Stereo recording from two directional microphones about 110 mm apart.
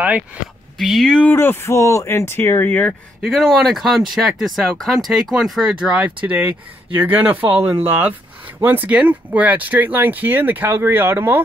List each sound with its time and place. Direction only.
0.7 s speech: centre (ahead or behind)
1.3 s speech: 20° left (ahead or behind)
3.2 s speech: centre (ahead or behind); by 11.4 s 20° right (ahead or behind)